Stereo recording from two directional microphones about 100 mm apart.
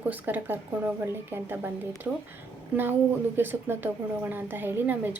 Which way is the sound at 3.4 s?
20° right (ahead or behind).